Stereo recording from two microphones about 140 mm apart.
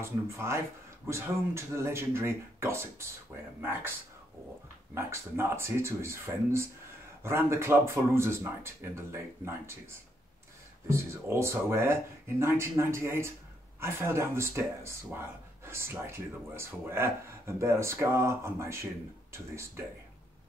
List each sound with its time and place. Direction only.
0.0 s speech: 20° right (ahead or behind)
4.9 s speech: 20° right (ahead or behind)
10.9 s speech: 20° right (ahead or behind)